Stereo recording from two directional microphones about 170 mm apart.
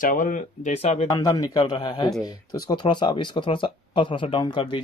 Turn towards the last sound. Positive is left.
turn(degrees=25)  # may be behind; listen again after turning